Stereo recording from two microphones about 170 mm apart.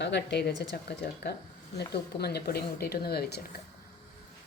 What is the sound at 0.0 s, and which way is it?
Speech, 90° left.